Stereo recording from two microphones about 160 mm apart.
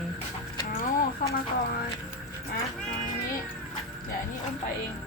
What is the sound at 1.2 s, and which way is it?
Speech, 65° left (ahead or behind).